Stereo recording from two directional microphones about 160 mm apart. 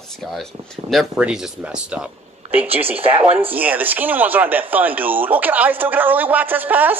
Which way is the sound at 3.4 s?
10° right (ahead or behind).